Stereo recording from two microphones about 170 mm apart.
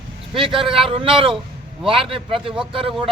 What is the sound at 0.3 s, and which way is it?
A man's voice, 30° right (ahead or behind).